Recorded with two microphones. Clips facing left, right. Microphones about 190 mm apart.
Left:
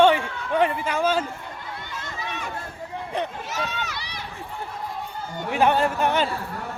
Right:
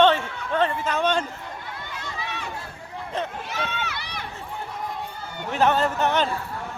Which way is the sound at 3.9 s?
55° right (ahead or behind).